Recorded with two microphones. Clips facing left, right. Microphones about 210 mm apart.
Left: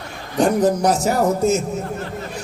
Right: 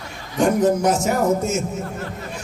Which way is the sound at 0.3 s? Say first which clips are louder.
Left 1 dB; 35° left (ahead or behind).